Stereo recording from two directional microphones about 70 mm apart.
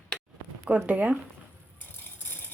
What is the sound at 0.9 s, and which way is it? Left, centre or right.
Speech, right.